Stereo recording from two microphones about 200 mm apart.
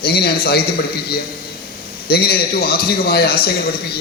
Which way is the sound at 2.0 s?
50° left (ahead or behind).